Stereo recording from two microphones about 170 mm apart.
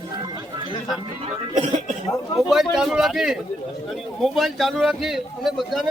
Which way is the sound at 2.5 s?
Centre (ahead or behind).